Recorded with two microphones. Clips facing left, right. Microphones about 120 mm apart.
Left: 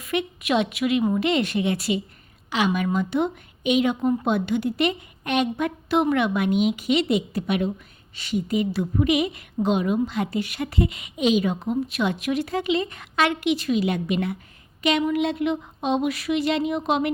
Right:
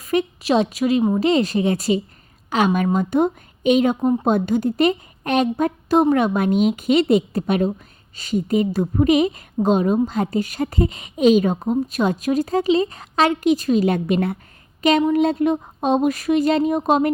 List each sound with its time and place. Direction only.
0.0 s a woman's voice: 40° right (ahead or behind)